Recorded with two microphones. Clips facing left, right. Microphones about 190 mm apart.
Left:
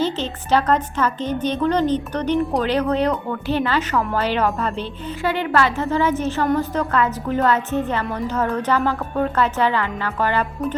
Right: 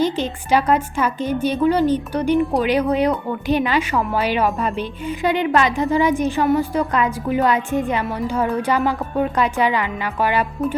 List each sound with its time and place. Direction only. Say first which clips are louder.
0.0 s a woman's voice: right 2 dB; 10° right (ahead or behind)